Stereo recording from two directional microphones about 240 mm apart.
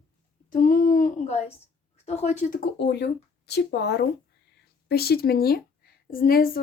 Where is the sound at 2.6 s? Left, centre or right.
Left.